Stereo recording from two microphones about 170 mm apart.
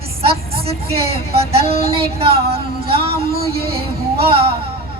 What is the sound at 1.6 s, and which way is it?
Music, 65° right (ahead or behind).